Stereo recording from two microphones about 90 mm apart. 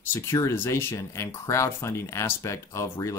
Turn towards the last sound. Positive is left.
turn(degrees=35)  # may be behind; listen again after turning